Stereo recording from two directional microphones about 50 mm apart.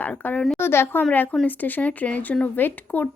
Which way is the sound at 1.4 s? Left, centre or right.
Left.